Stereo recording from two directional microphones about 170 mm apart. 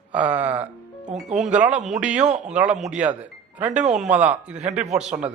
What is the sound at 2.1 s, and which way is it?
Speech, 45° right (ahead or behind).